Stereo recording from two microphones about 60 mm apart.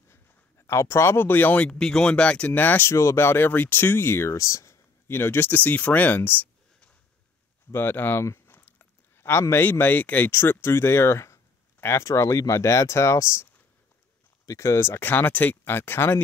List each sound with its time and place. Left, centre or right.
0.1 s a sound: left
1.6 s speech: centre
2.5 s speech: left
2.9 s speech: left
7.7 s a sound: left
9.7 s speech: left
10.3 s speech: left
12.1 s speech: left
14.4 s speech: left